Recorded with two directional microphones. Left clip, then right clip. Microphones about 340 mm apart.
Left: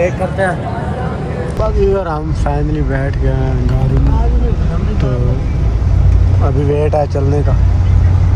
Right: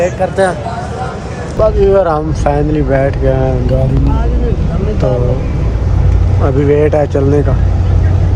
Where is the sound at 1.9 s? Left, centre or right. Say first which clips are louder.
Right 7 dB; right.